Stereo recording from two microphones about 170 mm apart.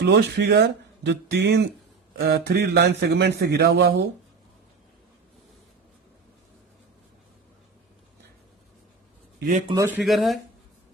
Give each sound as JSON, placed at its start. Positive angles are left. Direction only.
{"t": 0.0, "sound": "speech", "side_deg": -80}
{"t": 2.1, "sound": "a man's voice", "side_deg": -65}
{"t": 9.7, "sound": "speech", "side_deg": -15}
{"t": 10.0, "sound": "speech", "side_deg": 0}